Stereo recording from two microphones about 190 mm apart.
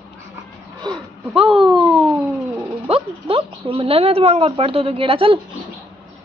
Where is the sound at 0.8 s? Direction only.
30° right (ahead or behind).